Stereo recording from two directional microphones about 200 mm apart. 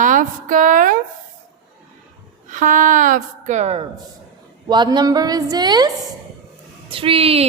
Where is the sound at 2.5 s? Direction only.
40° right (ahead or behind).